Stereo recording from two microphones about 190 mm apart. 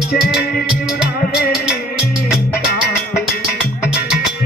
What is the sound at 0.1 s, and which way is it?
Music, 55° left (ahead or behind).